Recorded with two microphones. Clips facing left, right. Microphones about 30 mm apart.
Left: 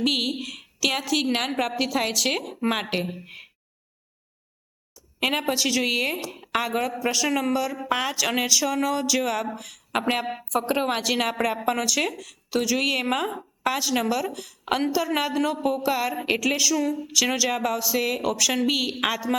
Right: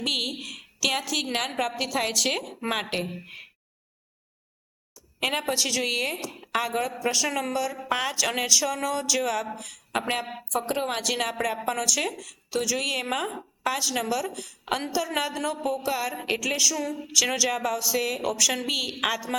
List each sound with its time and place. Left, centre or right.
0.0 s a woman's voice: centre
5.2 s a woman's voice: centre